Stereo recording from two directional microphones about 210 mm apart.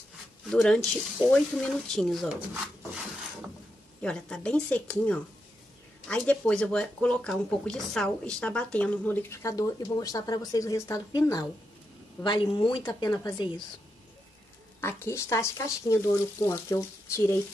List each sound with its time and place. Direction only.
0.5 s speech: 5° left (ahead or behind); by 13.5 s 20° left (ahead or behind)
14.8 s speech: 10° left (ahead or behind)